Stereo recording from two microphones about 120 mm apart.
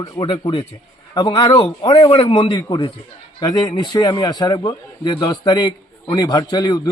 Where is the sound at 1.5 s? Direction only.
50° left (ahead or behind).